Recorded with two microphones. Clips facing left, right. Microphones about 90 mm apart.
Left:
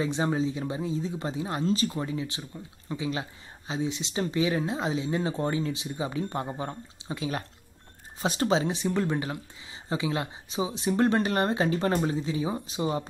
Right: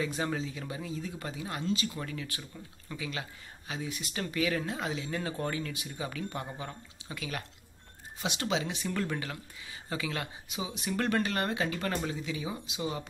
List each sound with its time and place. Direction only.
0.0 s speech: 25° left (ahead or behind)